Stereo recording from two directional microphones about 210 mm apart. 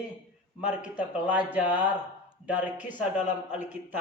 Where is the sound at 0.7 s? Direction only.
5° right (ahead or behind).